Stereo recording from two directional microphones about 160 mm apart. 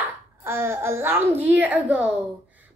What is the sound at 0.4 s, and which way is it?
A child's voice, 15° right (ahead or behind).